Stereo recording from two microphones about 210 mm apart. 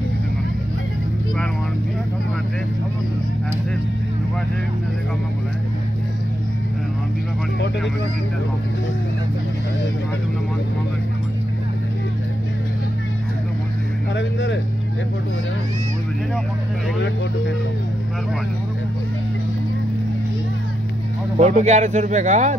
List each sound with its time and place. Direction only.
14.1 s vehicle: 55° left (ahead or behind)
21.4 s speech: 35° right (ahead or behind)